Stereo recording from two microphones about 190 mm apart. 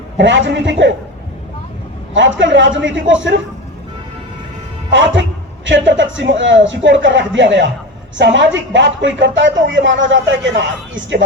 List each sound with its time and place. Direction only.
0.2 s speech: 70° right (ahead or behind)
2.4 s speech: 75° right (ahead or behind)
4.9 s speech: 75° right (ahead or behind)